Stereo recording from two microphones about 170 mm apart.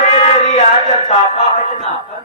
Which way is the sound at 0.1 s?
40° left (ahead or behind).